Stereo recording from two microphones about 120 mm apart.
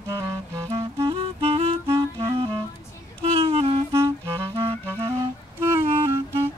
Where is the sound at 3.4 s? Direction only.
50° right (ahead or behind).